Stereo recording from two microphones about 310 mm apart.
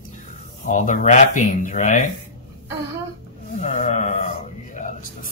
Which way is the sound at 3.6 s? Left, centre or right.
Left.